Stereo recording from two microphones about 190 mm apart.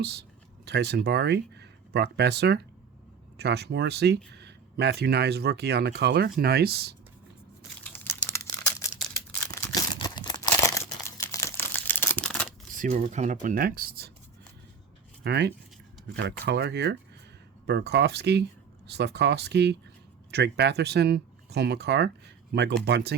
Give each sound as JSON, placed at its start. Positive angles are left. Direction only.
{"t": 0.0, "sound": "speech", "side_deg": -60}
{"t": 7.9, "sound": "crumpling", "side_deg": 10}
{"t": 12.7, "sound": "speech", "side_deg": -45}
{"t": 15.2, "sound": "speech", "side_deg": -60}